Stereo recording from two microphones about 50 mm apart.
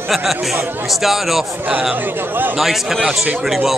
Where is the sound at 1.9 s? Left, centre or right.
Right.